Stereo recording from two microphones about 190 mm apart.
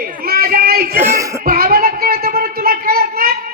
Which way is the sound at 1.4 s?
50° right (ahead or behind).